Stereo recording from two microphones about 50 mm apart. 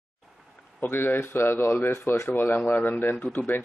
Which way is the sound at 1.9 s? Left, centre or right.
Left.